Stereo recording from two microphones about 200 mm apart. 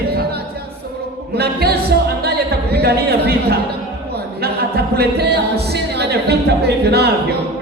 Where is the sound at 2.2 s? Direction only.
55° right (ahead or behind).